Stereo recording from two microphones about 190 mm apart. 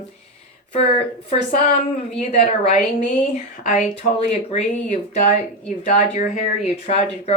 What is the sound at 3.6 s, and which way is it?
Speech, 40° left (ahead or behind).